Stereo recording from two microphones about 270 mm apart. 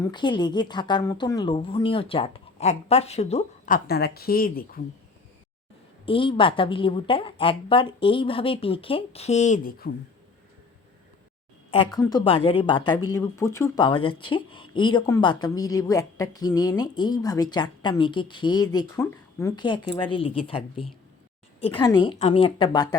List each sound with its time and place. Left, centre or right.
0.0 s a woman's voice: centre
3.8 s speech: left
6.1 s a woman's voice: centre
11.9 s a woman's voice: centre
21.6 s speech: centre